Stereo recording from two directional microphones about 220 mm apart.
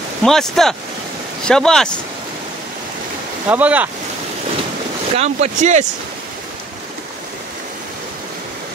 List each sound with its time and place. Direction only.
0.2 s speech: centre (ahead or behind)
3.4 s speech: 5° right (ahead or behind)
5.1 s speech: 30° right (ahead or behind)